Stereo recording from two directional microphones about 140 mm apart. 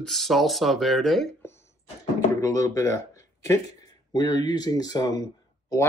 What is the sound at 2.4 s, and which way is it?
Speech, 20° left (ahead or behind).